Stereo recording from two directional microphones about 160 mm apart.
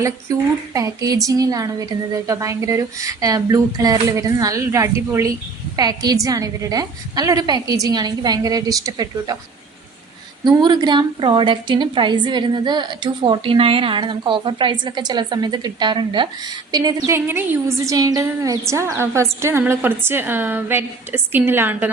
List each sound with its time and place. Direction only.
0.0 s a woman's voice: 20° right (ahead or behind)
10.4 s a woman's voice: 25° right (ahead or behind)
17.2 s a woman's voice: 15° right (ahead or behind)